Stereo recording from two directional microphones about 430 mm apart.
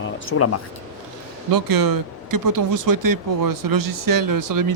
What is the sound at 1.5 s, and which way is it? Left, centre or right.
Speech, right.